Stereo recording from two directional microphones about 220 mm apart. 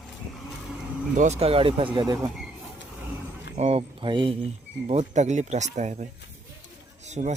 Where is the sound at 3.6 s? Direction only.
25° right (ahead or behind).